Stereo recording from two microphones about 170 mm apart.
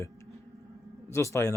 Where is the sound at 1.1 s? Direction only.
15° left (ahead or behind).